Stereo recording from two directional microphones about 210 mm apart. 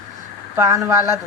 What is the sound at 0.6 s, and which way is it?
Speech, 15° right (ahead or behind).